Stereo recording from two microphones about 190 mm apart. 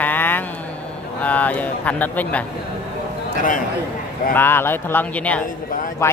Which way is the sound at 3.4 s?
45° left (ahead or behind).